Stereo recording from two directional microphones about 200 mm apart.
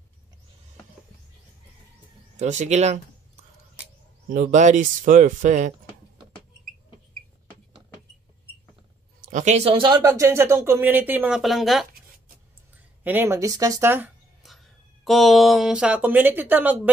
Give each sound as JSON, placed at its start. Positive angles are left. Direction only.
{"t": 2.3, "sound": "speech", "side_deg": -35}
{"t": 4.3, "sound": "speech", "side_deg": -40}
{"t": 9.2, "sound": "speech", "side_deg": -40}
{"t": 13.0, "sound": "speech", "side_deg": -10}